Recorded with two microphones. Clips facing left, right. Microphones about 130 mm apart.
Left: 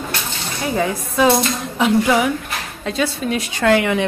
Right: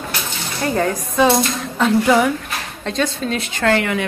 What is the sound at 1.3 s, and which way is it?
A woman's voice, 5° left (ahead or behind).